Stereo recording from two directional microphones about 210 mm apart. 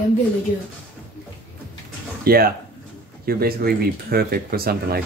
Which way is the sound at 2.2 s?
45° right (ahead or behind).